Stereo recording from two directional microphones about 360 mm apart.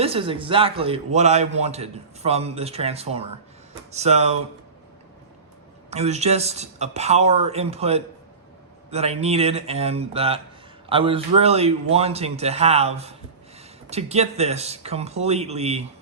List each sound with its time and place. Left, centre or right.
0.0 s a man's voice: centre
5.9 s a man's voice: centre